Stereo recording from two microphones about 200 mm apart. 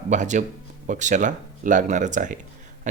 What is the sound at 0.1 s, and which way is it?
Speech, 35° right (ahead or behind).